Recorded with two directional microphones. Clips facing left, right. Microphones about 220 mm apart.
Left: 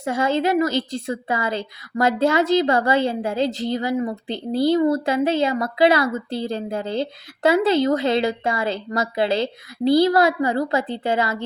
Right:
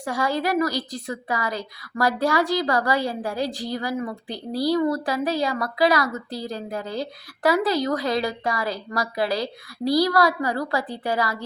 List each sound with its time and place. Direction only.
0.0 s a woman's voice: 25° left (ahead or behind)